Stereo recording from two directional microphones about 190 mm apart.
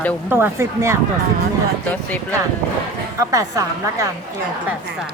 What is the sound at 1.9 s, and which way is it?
Speech, 10° left (ahead or behind).